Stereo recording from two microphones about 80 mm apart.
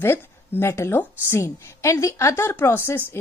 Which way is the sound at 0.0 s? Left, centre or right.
Left.